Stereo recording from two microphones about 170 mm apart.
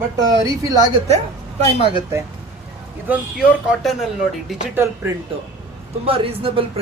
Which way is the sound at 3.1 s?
5° right (ahead or behind).